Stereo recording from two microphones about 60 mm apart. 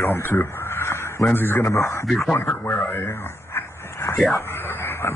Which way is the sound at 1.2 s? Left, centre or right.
Left.